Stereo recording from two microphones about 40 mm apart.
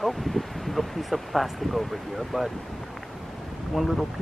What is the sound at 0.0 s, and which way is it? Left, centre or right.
Speech, centre.